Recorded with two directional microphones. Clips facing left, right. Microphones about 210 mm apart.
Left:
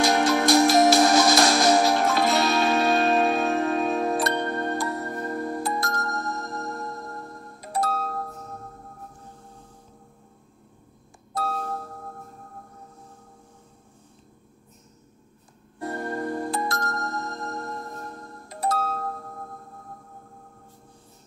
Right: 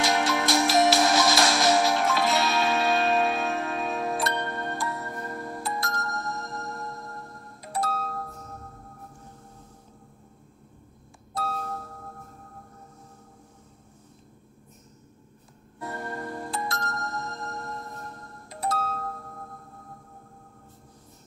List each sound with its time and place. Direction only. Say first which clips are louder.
0.0 s music: left 5 dB; 40° left (ahead or behind)
7.7 s music: left 3 dB; 40° left (ahead or behind)
15.8 s music: left 5 dB; 40° left (ahead or behind)
18.6 s music: left 3 dB; 40° left (ahead or behind)